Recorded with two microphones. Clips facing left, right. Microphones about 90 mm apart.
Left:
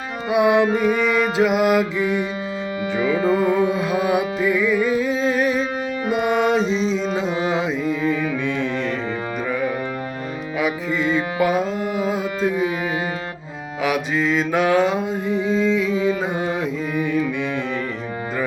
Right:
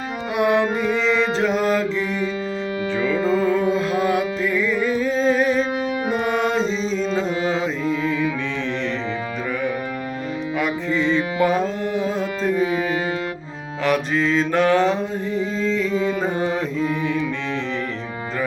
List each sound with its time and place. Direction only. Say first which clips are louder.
0.3 s music: left 3 dB; 15° left (ahead or behind)
10.6 s music: left 1 dB; 5° left (ahead or behind)
13.8 s mantra: right 1 dB; 5° left (ahead or behind)